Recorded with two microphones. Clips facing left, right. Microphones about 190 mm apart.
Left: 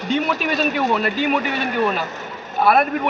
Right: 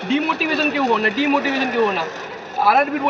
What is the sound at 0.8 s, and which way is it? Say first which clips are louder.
Speech: right 2 dB; 80° right.